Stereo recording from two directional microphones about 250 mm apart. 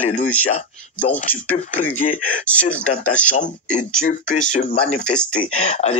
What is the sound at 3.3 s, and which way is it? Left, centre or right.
Speech, left.